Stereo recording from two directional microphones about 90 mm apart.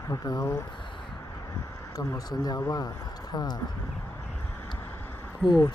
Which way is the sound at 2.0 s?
45° left (ahead or behind).